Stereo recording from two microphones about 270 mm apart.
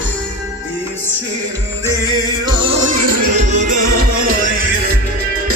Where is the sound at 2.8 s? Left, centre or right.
Right.